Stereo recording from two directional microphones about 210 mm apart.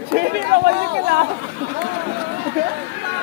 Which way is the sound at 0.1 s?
50° right (ahead or behind).